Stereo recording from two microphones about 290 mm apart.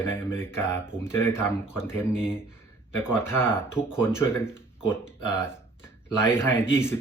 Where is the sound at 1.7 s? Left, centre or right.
Centre.